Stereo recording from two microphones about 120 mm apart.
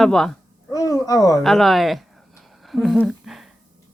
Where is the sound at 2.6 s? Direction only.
Centre (ahead or behind).